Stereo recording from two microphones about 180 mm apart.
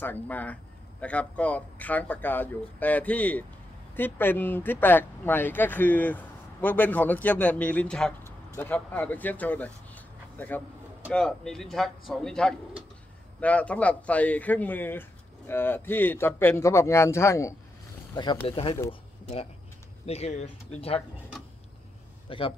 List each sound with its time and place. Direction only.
0.0 s speech: 10° left (ahead or behind); by 18.8 s 30° left (ahead or behind)
20.1 s speech: 35° left (ahead or behind)
22.3 s speech: 30° left (ahead or behind)